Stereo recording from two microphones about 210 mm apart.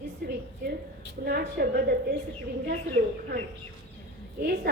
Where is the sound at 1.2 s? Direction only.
45° right (ahead or behind).